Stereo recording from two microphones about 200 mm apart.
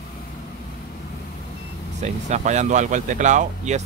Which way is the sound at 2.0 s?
35° right (ahead or behind).